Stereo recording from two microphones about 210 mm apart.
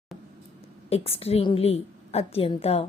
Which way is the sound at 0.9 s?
30° left (ahead or behind).